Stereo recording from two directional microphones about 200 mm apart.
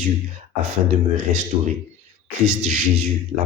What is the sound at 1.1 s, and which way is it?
A man's voice, 40° right (ahead or behind).